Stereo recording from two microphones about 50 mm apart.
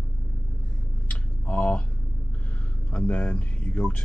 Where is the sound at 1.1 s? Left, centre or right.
Left.